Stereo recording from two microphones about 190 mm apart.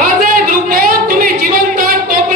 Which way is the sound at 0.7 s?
50° right (ahead or behind).